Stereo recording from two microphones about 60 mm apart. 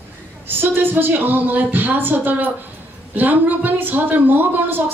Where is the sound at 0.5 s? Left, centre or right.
Right.